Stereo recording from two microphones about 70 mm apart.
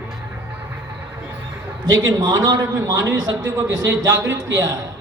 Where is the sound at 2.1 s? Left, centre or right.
Right.